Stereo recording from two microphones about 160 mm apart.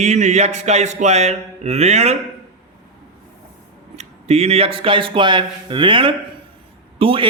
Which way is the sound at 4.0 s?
40° right (ahead or behind).